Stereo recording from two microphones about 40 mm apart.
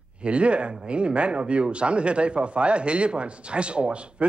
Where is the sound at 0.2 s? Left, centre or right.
Right.